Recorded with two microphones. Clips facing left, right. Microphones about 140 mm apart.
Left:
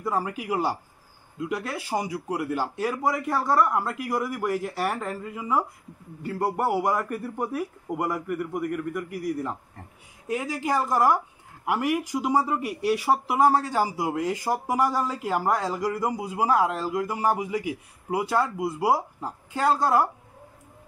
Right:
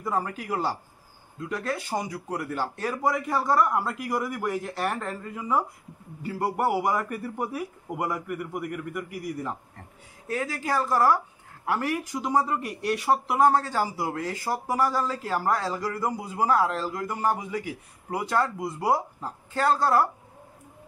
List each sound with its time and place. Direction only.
0.0 s speech: 5° left (ahead or behind)
10.2 s speech: 15° left (ahead or behind)